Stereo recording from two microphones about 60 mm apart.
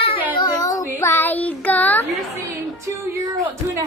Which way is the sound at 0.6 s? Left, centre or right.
Left.